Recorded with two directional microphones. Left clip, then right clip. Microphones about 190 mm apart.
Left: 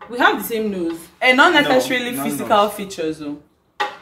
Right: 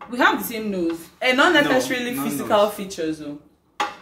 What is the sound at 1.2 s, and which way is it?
Speech, 10° left (ahead or behind).